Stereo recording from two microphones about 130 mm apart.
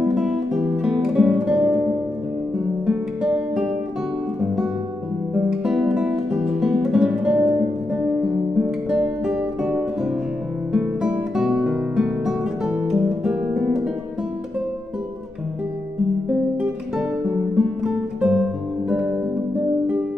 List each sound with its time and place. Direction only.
0.0 s music: 5° right (ahead or behind)
2.9 s music: 5° right (ahead or behind)
5.3 s music: 5° right (ahead or behind)
7.9 s guitar: 5° right (ahead or behind)
10.7 s music: 5° right (ahead or behind)
16.9 s music: 5° right (ahead or behind)